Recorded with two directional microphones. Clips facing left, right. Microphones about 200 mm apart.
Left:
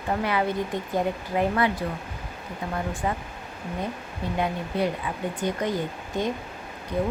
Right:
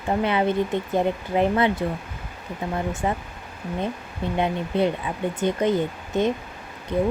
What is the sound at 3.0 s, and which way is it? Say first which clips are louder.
Speech: right 3 dB; 25° right (ahead or behind).